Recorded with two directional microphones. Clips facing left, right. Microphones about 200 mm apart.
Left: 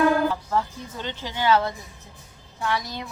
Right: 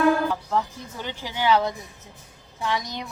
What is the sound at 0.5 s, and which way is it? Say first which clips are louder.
A woman's voice: even; 10° right (ahead or behind).